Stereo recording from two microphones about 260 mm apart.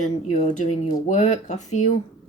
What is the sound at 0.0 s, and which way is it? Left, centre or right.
Speech, left.